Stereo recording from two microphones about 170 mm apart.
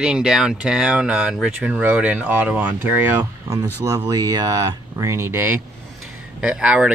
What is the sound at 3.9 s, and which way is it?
Speech, 20° right (ahead or behind).